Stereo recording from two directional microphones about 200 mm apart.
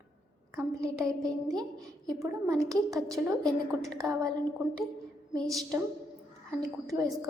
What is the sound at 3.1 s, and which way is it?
Speech, centre (ahead or behind).